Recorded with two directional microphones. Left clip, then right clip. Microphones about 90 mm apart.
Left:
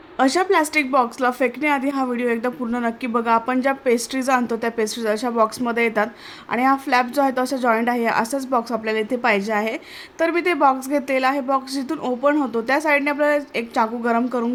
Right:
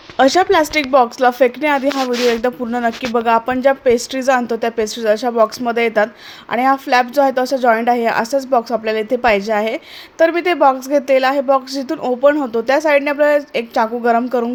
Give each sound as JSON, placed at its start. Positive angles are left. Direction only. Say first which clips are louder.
{"t": 0.2, "sound": "a woman's voice", "louder": "right 6 dB", "side_deg": -35}